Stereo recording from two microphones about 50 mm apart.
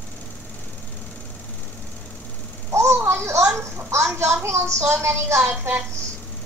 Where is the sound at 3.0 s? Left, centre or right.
Right.